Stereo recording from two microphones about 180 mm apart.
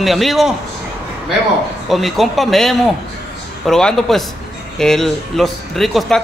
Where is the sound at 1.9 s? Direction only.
Centre (ahead or behind).